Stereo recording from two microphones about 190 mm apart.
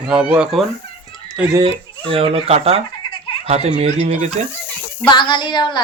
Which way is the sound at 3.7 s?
35° right (ahead or behind).